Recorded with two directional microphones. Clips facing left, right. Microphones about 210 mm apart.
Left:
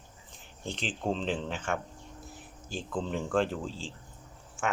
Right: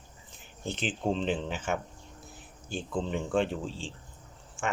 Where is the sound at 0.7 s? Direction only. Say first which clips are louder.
Right 2 dB; 5° right (ahead or behind).